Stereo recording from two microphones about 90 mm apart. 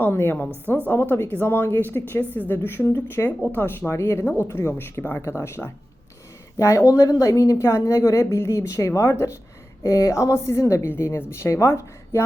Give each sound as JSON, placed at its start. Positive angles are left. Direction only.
{"t": 0.0, "sound": "a woman's voice", "side_deg": 25}